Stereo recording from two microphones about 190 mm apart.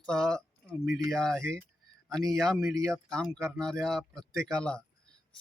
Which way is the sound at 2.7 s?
15° right (ahead or behind).